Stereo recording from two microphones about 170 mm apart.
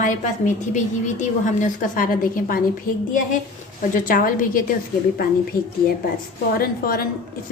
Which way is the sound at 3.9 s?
55° left (ahead or behind).